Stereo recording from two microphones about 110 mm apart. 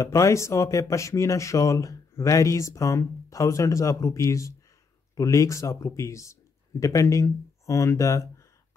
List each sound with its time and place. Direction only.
0.0 s speech: 30° left (ahead or behind)